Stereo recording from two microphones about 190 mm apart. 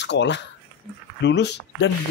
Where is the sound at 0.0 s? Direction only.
65° left (ahead or behind).